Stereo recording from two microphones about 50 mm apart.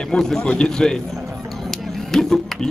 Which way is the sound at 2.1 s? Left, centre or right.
Centre.